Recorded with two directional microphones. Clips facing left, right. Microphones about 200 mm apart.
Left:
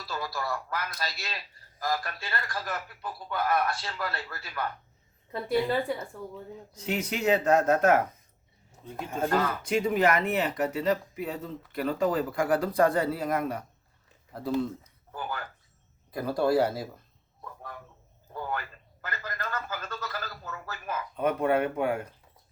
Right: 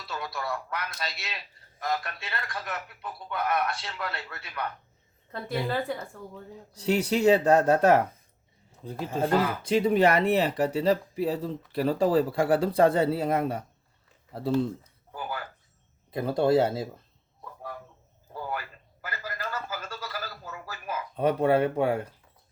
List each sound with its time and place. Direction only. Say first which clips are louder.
0.0 s a man's voice: left 1 dB; centre (ahead or behind)
6.7 s speech: right 6 dB; 35° right (ahead or behind)
15.1 s speech: even; 10° right (ahead or behind)
16.1 s speech: right 2 dB; 25° right (ahead or behind)
18.3 s a sound: even; 10° right (ahead or behind)
21.2 s speech: right 3 dB; 30° right (ahead or behind)